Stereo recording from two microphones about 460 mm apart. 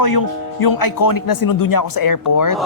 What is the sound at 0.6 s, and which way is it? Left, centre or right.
Speech, left.